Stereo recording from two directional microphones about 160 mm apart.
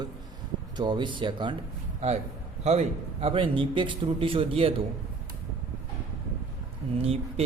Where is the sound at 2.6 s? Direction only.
40° right (ahead or behind).